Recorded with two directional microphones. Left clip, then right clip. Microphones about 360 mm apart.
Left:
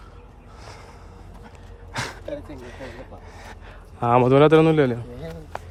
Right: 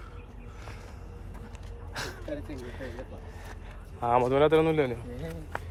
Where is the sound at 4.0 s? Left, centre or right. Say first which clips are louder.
Left 7 dB; left.